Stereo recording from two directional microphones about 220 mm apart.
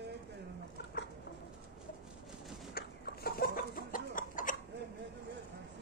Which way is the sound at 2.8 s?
45° left (ahead or behind).